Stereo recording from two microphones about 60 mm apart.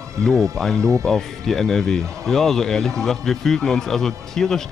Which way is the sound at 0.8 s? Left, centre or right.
Right.